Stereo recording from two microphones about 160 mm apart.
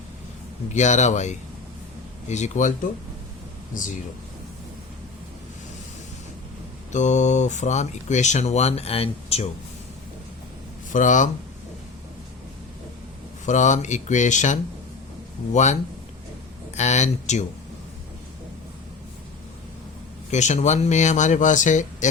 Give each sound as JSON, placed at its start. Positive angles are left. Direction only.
{"t": 0.7, "sound": "speech", "side_deg": 45}
{"t": 6.9, "sound": "speech", "side_deg": 50}
{"t": 10.9, "sound": "speech", "side_deg": 50}
{"t": 13.4, "sound": "speech", "side_deg": 50}
{"t": 20.3, "sound": "speech", "side_deg": 45}